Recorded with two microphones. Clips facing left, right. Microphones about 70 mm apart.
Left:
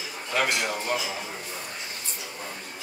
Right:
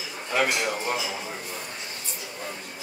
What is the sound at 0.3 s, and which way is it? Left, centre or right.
Speech, centre.